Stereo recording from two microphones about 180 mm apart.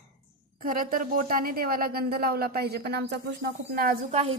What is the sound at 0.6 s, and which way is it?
Speech, 50° right (ahead or behind).